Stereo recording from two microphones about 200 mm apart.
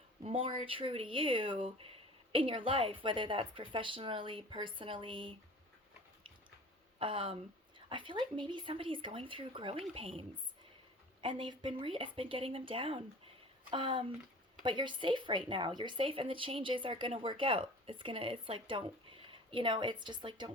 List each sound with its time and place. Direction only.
0.2 s speech: 25° right (ahead or behind)
7.0 s speech: 25° right (ahead or behind)